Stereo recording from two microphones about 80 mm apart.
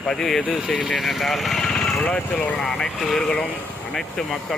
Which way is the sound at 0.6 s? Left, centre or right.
Centre.